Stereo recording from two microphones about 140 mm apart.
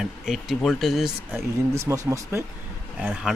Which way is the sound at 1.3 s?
20° right (ahead or behind).